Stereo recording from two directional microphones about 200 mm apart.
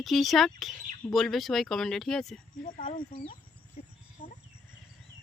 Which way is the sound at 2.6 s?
40° left (ahead or behind).